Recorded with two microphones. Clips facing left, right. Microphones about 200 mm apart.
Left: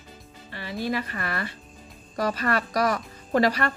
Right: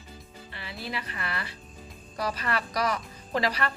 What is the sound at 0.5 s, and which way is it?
A woman's voice, 45° left (ahead or behind).